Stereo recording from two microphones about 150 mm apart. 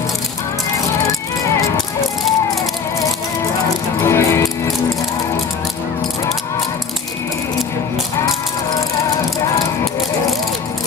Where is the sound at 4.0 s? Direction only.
15° left (ahead or behind).